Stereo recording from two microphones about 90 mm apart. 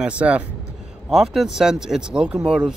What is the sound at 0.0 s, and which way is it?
Speech, 10° right (ahead or behind).